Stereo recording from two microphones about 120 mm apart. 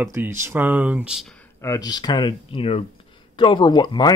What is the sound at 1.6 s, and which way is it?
Speech, 30° left (ahead or behind).